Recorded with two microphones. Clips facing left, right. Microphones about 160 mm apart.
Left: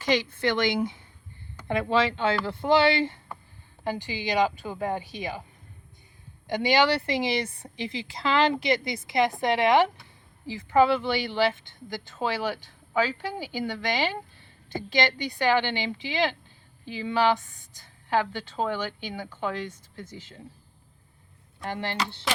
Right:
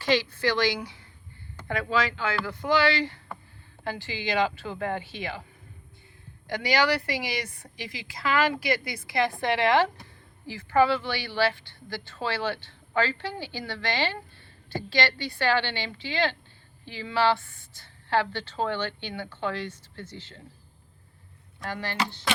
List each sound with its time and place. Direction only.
0.0 s a woman's voice: 20° left (ahead or behind)
6.5 s a woman's voice: 20° left (ahead or behind)
21.6 s a woman's voice: 20° left (ahead or behind)